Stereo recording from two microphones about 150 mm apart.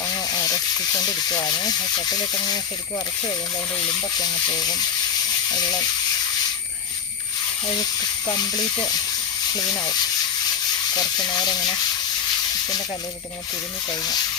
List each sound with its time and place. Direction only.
0.1 s speech: 25° left (ahead or behind)
4.2 s speech: 25° left (ahead or behind)
9.6 s speech: 25° left (ahead or behind)
10.9 s speech: 25° left (ahead or behind)
13.9 s speech: 25° left (ahead or behind)